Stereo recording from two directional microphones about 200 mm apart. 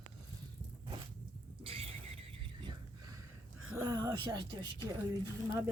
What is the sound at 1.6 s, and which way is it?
Neigh, 30° right (ahead or behind).